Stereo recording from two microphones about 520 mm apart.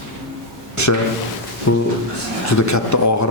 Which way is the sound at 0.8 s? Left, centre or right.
Left.